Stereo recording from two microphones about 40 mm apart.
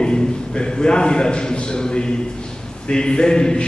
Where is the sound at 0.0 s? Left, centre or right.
Left.